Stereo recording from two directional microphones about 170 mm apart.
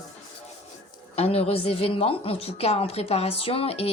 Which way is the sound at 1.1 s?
35° left (ahead or behind).